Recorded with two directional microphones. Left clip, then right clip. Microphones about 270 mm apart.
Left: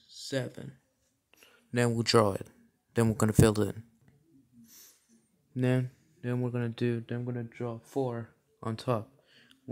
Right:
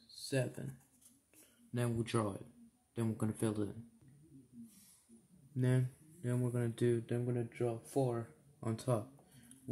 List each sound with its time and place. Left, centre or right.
1.7 s speech: left
5.6 s speech: left